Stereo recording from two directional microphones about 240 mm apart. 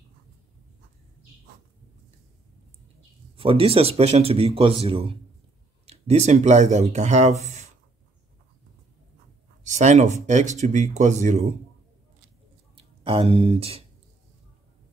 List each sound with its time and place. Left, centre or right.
3.3 s speech: right
9.7 s speech: right
12.7 s speech: right